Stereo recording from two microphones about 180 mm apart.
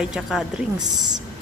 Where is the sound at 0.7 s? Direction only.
20° right (ahead or behind).